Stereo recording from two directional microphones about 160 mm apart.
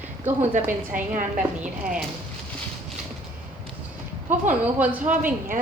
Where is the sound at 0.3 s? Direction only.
50° right (ahead or behind).